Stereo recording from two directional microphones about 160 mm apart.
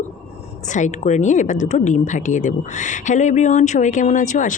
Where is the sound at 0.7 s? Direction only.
50° left (ahead or behind).